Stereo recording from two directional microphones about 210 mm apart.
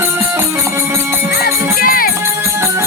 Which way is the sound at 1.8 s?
45° left (ahead or behind).